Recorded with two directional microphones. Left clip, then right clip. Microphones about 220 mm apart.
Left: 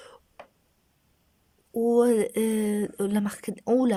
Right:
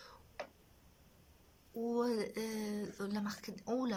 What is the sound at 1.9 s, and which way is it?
Speech, 40° left (ahead or behind).